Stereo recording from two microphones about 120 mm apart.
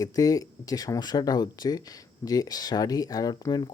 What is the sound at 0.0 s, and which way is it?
Speech, 30° left (ahead or behind).